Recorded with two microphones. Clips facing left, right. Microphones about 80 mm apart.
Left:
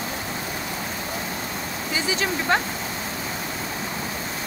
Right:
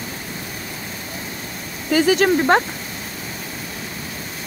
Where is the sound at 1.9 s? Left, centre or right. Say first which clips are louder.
Right 11 dB; right.